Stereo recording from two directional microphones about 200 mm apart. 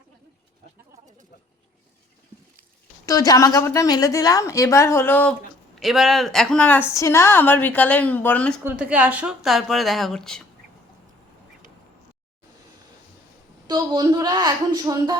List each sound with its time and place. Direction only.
3.1 s a woman's voice: 15° left (ahead or behind)
8.6 s a woman's voice: 5° right (ahead or behind)
13.7 s a woman's voice: 20° right (ahead or behind)